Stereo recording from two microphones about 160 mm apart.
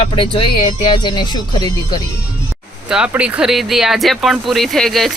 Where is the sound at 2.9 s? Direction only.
5° right (ahead or behind).